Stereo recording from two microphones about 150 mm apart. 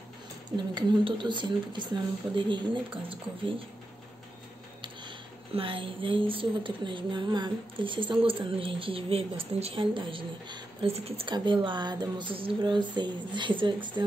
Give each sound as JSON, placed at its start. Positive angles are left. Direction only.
{"t": 0.5, "sound": "speech", "side_deg": -30}
{"t": 4.8, "sound": "speech", "side_deg": -35}